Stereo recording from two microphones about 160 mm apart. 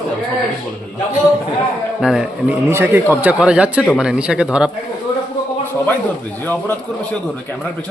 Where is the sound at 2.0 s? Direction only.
Centre (ahead or behind).